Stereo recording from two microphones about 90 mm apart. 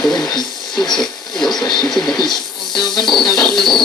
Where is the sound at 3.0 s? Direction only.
Centre (ahead or behind).